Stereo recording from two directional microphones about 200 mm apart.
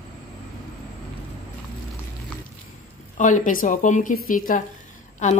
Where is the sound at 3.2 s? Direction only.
40° left (ahead or behind).